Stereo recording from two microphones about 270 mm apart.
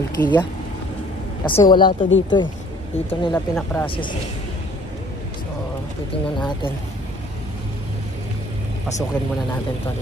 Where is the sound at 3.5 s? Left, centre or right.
Centre.